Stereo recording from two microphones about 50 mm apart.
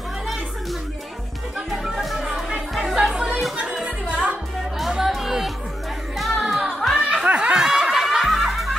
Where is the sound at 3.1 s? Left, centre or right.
Centre.